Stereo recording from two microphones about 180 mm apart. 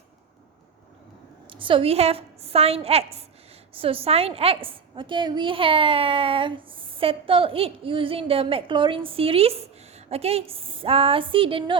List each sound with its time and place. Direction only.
1.5 s a woman's voice: 30° right (ahead or behind)